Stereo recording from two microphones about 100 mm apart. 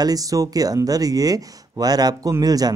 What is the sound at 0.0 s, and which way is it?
Speech, 40° right (ahead or behind).